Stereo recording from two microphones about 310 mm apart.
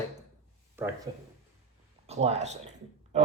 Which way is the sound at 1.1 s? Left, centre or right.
Centre.